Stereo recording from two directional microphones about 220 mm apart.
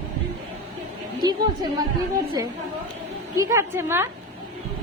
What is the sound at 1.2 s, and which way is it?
Speech, 20° right (ahead or behind).